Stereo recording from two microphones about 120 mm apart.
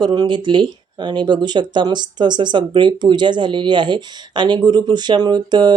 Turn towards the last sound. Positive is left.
turn(degrees=-35)  # may be behind; listen again after turning